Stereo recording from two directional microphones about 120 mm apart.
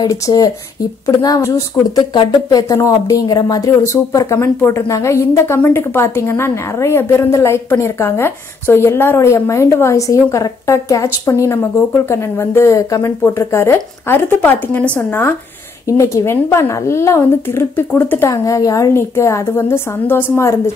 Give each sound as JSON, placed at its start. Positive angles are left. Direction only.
{"t": 0.0, "sound": "speech", "side_deg": 35}
{"t": 18.3, "sound": "speech", "side_deg": 30}